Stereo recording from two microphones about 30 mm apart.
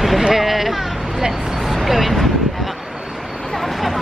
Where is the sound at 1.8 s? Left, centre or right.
Centre.